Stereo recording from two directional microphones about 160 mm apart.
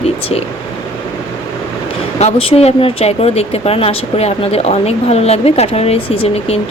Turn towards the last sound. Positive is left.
turn(degrees=40)  # may be behind; listen again after turning